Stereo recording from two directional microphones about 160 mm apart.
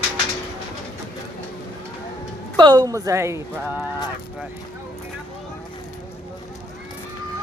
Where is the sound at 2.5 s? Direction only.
25° right (ahead or behind).